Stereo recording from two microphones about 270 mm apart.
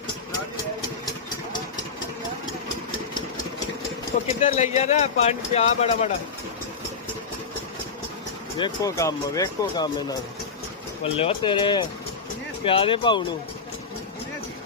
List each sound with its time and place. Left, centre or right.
4.4 s speech: left
8.5 s speech: centre